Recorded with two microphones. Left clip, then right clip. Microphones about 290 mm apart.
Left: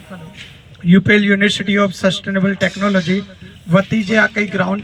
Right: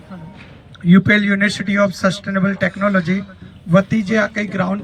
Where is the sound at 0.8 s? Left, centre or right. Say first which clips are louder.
Left 2 dB; centre.